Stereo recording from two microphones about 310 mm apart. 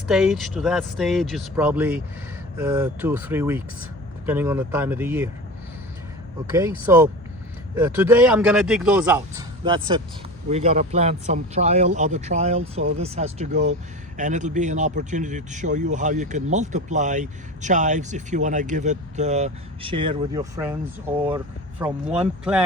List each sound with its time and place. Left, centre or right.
0.1 s a man's voice: centre
6.5 s a man's voice: centre